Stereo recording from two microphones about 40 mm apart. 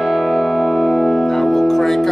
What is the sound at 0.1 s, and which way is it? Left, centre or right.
Music, centre.